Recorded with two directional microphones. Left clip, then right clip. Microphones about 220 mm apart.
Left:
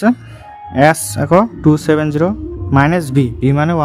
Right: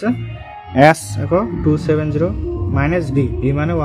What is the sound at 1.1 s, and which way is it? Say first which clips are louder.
Speech: left 6 dB; 50° left (ahead or behind).